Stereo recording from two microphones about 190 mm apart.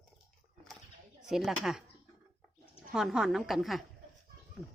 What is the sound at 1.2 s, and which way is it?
Speech, centre (ahead or behind).